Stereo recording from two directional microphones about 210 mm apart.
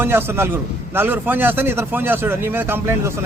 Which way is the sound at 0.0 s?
10° right (ahead or behind).